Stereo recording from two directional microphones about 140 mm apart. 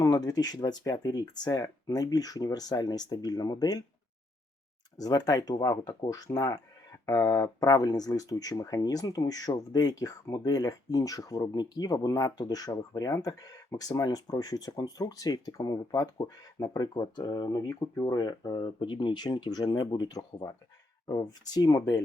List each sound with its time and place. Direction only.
0.0 s speech: 25° left (ahead or behind)
4.9 s speech: 25° left (ahead or behind)